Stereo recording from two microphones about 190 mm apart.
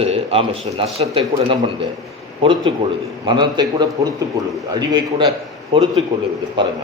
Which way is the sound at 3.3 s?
25° right (ahead or behind).